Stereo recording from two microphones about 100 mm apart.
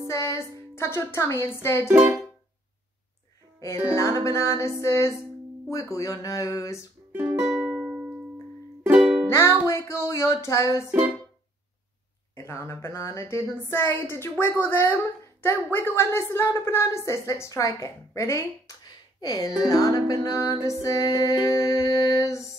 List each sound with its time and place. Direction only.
0.1 s speech: 30° left (ahead or behind)
3.5 s music: 30° left (ahead or behind)
4.3 s speech: 30° left (ahead or behind)
7.1 s music: 20° right (ahead or behind)
7.3 s music: 5° right (ahead or behind)
9.3 s speech: 30° left (ahead or behind)
12.4 s speech: 30° left (ahead or behind)
18.8 s a sound: 45° left (ahead or behind)
19.6 s speech: 35° left (ahead or behind)
20.6 s music: 35° left (ahead or behind)